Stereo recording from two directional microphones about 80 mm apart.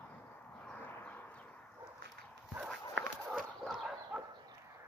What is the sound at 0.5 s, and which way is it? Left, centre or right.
Vehicle, centre.